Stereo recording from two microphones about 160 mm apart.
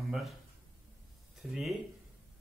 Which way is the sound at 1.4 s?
Centre (ahead or behind).